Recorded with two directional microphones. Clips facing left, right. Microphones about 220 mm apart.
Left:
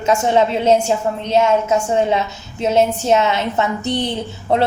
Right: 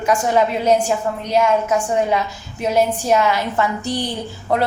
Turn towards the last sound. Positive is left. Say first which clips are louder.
# left 2 dB
turn(degrees=25)  # may be behind; listen again after turning